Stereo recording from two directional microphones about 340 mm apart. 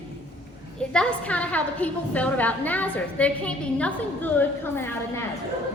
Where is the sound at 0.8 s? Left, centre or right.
Centre.